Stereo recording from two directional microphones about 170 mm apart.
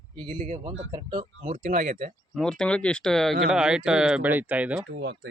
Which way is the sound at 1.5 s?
45° right (ahead or behind).